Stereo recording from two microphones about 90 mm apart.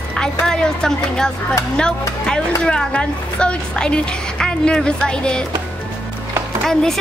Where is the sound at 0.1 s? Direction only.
10° left (ahead or behind).